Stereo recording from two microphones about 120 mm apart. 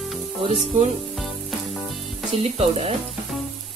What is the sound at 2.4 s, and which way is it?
Speech, 60° right (ahead or behind).